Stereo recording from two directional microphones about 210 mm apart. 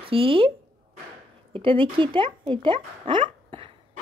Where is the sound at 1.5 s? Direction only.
25° right (ahead or behind).